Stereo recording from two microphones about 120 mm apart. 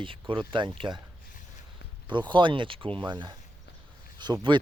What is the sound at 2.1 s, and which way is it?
Speech, 40° right (ahead or behind).